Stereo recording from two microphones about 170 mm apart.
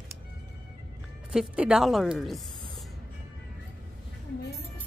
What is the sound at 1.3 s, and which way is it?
A woman's voice, 5° right (ahead or behind).